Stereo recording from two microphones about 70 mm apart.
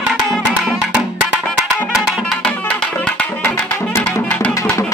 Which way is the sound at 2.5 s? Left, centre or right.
Centre.